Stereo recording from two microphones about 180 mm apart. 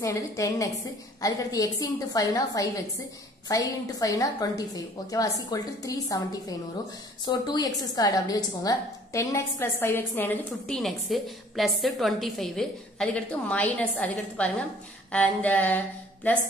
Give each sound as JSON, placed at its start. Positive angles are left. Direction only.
{"t": 0.0, "sound": "a woman's voice", "side_deg": 15}
{"t": 7.2, "sound": "a woman's voice", "side_deg": 20}